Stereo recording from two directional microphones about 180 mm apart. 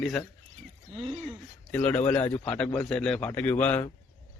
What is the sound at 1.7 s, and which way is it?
Speech, 10° left (ahead or behind).